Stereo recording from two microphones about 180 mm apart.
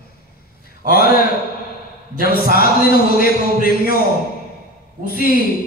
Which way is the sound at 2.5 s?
55° left (ahead or behind).